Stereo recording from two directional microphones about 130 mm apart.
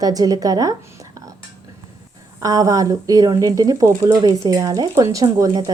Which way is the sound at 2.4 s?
30° right (ahead or behind).